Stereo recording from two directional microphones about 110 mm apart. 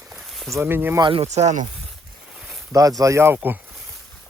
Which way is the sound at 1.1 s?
80° right.